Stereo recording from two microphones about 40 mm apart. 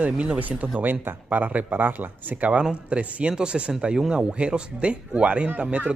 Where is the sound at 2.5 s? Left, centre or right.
Right.